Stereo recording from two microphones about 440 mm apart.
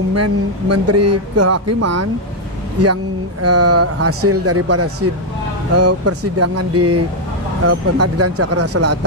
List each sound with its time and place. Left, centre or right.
0.1 s speech: right